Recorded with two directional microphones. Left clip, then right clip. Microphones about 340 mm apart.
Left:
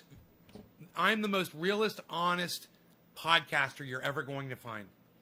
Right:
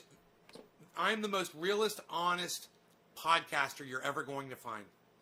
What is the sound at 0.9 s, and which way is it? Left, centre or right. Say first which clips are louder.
A man's voice: left 4 dB; left.